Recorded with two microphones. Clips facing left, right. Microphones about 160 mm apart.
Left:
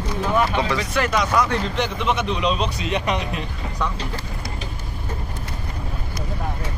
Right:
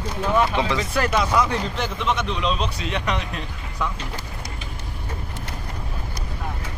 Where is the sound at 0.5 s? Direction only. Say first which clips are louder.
Even; 20° right (ahead or behind).